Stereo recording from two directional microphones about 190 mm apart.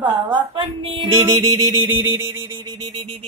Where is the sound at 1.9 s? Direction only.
15° right (ahead or behind).